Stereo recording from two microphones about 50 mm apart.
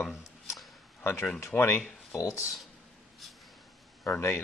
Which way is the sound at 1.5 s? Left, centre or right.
Left.